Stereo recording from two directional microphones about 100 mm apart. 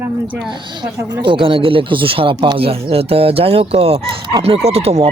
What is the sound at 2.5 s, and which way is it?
Speech, 70° right (ahead or behind).